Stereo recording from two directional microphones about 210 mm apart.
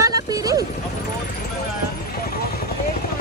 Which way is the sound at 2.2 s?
45° left (ahead or behind).